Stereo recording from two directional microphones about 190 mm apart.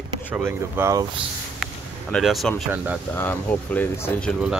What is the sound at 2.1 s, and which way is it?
Speech, centre (ahead or behind).